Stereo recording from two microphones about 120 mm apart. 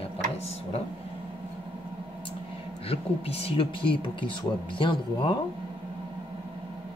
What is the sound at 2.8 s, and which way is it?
Speech, 55° left (ahead or behind).